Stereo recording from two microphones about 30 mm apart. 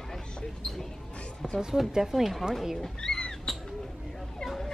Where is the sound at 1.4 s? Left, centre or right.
Centre.